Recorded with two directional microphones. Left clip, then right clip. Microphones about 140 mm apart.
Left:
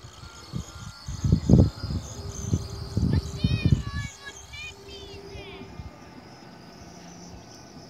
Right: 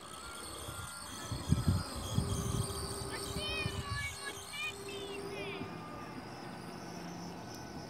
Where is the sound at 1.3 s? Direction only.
45° right (ahead or behind).